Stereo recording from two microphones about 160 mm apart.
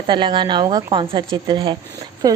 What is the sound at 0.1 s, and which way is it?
A woman's voice, 30° right (ahead or behind).